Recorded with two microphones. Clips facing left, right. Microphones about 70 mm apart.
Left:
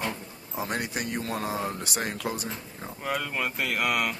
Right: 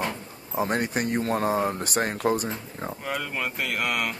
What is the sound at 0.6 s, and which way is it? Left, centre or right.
Speech, right.